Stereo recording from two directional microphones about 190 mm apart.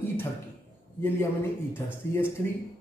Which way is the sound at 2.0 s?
15° left (ahead or behind).